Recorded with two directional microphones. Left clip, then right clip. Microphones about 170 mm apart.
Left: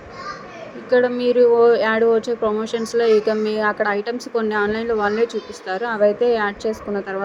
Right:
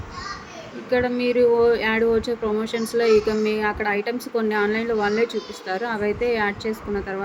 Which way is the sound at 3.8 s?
15° right (ahead or behind).